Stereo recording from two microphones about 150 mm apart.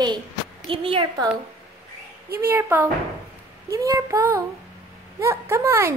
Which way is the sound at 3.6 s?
20° right (ahead or behind).